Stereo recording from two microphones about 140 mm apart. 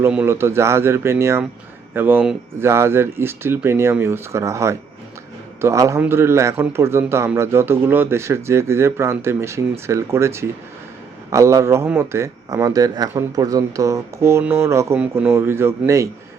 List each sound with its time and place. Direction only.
0.1 s a man's voice: 15° right (ahead or behind)